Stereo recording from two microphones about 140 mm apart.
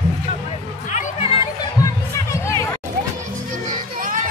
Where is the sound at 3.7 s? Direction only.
75° right (ahead or behind).